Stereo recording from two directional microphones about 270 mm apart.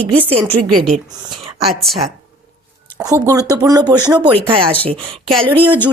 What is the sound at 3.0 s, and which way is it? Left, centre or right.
Speech, centre.